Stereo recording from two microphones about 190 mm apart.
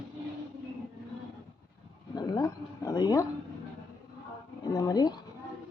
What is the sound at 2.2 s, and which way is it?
Speech, 20° left (ahead or behind).